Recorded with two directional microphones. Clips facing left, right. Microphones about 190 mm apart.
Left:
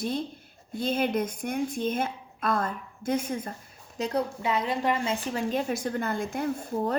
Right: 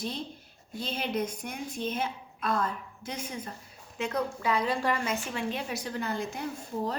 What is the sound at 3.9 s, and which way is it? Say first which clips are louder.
Speech: left 3 dB; 35° left (ahead or behind).